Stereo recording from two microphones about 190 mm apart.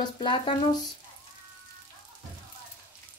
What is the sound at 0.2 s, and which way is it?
Frying, 25° left (ahead or behind).